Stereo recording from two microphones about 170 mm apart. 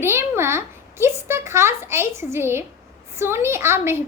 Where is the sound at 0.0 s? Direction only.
15° right (ahead or behind).